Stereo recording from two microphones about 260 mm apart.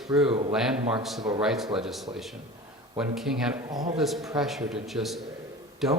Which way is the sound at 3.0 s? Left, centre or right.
Centre.